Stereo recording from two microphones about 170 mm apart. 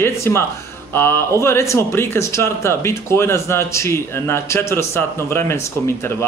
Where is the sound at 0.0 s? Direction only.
15° left (ahead or behind).